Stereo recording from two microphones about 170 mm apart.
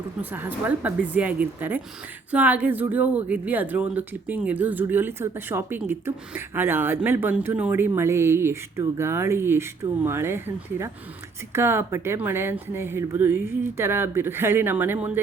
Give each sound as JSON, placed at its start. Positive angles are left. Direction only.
{"t": 0.2, "sound": "speech", "side_deg": -10}